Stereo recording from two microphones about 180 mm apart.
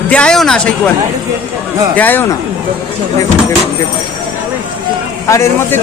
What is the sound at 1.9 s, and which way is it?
Speech, 10° left (ahead or behind).